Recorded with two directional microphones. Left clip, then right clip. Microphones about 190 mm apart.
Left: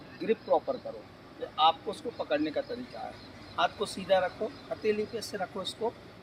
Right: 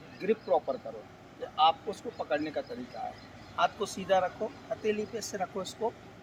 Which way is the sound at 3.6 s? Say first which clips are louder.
Left 1 dB; 10° right (ahead or behind).